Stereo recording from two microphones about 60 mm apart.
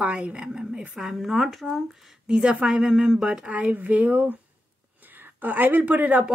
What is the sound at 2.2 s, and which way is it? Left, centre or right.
Speech, centre.